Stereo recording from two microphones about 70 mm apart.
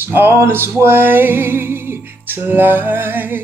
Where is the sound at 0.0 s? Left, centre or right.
Right.